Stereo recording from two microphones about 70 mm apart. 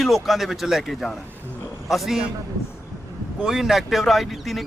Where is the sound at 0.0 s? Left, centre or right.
Centre.